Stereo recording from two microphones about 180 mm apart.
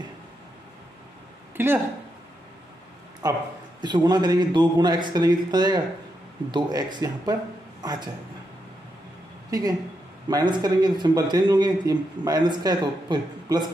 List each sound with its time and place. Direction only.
1.6 s speech: 10° right (ahead or behind)
3.2 s a man's voice: 20° right (ahead or behind)
9.5 s a man's voice: 20° right (ahead or behind)